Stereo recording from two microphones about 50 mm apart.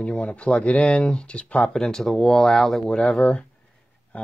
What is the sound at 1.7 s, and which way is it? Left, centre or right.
Speech, centre.